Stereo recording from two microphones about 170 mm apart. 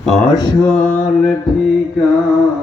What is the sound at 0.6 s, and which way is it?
Mantra, 5° left (ahead or behind).